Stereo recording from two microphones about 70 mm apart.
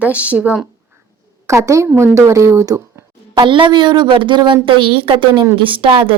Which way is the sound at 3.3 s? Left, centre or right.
Right.